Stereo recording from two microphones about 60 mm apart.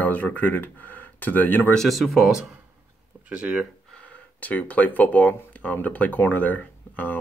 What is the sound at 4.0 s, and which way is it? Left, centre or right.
Speech, left.